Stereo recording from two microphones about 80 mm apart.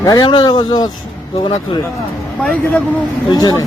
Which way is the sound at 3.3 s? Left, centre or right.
Left.